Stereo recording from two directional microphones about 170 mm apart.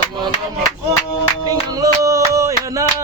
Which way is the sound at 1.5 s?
20° right (ahead or behind).